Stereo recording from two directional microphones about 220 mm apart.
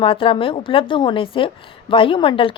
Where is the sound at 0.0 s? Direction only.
25° left (ahead or behind).